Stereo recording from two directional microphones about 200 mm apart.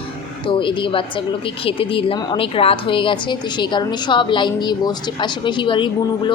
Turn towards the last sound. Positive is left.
turn(degrees=25)  # may be behind; listen again after turning